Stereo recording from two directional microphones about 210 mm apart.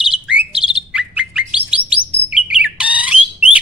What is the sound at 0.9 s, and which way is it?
Bird, 5° right (ahead or behind).